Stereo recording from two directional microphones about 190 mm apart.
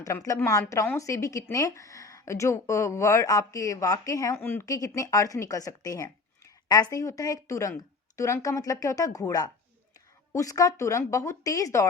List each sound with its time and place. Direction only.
0.0 s speech: 15° left (ahead or behind)